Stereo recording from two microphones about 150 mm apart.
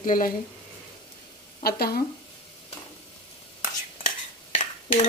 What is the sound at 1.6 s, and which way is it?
Stir, 90° left.